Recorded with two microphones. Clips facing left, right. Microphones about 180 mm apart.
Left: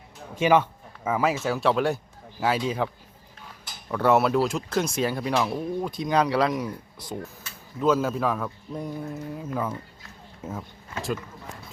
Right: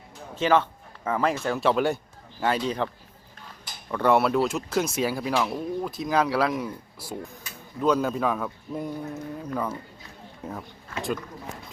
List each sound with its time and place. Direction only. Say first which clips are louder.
0.3 s speech: left 2 dB; 10° left (ahead or behind)